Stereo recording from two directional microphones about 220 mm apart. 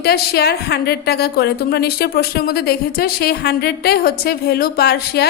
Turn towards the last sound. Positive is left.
turn(degrees=45)  # may be behind; listen again after turning